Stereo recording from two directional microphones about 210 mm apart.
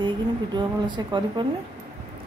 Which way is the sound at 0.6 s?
20° right (ahead or behind).